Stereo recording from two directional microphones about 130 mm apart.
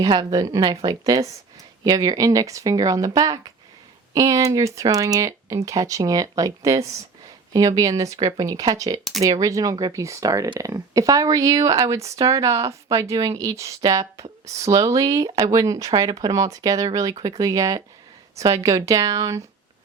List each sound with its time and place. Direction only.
0.0 s a woman's voice: 30° right (ahead or behind)